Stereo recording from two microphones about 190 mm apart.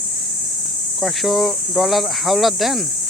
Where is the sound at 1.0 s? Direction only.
Centre (ahead or behind).